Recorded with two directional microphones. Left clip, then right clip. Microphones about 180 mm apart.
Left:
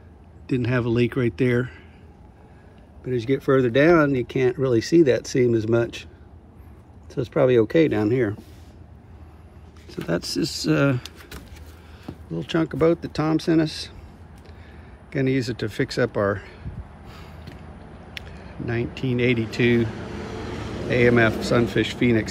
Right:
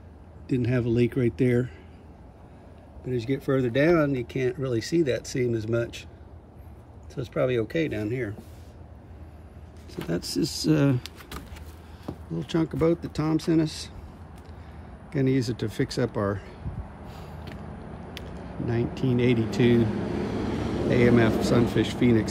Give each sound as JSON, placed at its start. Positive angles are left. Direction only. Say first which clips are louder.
{"t": 0.5, "sound": "speech", "louder": "left 3 dB", "side_deg": -5}
{"t": 3.1, "sound": "speech", "louder": "left 6 dB", "side_deg": -5}
{"t": 7.2, "sound": "speech", "louder": "left 7 dB", "side_deg": 0}
{"t": 10.0, "sound": "speech", "louder": "left 4 dB", "side_deg": -5}
{"t": 11.1, "sound": "keys jangling", "louder": "even", "side_deg": -5}
{"t": 12.1, "sound": "speech", "louder": "left 3 dB", "side_deg": -10}
{"t": 15.0, "sound": "speech", "louder": "left 2 dB", "side_deg": -10}
{"t": 18.2, "sound": "a sound", "louder": "left 6 dB", "side_deg": -15}
{"t": 18.7, "sound": "speech", "louder": "left 1 dB", "side_deg": -15}
{"t": 19.8, "sound": "vehicle", "louder": "right 1 dB", "side_deg": -55}
{"t": 21.4, "sound": "speech", "louder": "left 2 dB", "side_deg": -10}